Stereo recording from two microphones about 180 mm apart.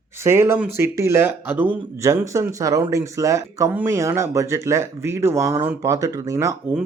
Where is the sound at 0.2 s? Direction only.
15° right (ahead or behind).